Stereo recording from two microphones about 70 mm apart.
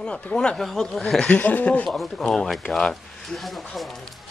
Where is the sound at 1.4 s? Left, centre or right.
Left.